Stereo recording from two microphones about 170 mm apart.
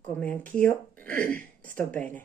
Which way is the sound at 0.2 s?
10° left (ahead or behind).